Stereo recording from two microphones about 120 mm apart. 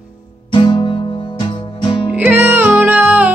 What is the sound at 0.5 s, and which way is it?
Music, 45° left (ahead or behind).